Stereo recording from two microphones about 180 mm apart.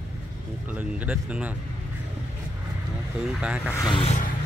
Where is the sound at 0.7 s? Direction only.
10° right (ahead or behind).